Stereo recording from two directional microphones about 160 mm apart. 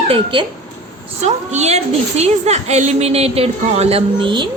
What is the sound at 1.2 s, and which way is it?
A woman's voice, 45° right (ahead or behind).